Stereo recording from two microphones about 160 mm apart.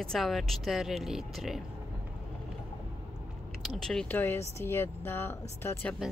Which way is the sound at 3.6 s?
Centre (ahead or behind).